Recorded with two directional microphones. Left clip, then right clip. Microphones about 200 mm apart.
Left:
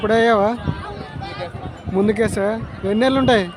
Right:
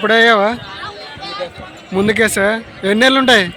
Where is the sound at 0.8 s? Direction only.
55° left (ahead or behind).